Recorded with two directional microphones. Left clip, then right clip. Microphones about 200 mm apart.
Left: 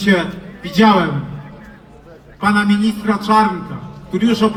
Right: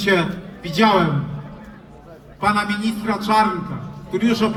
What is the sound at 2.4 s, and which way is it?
A man's voice, 20° left (ahead or behind).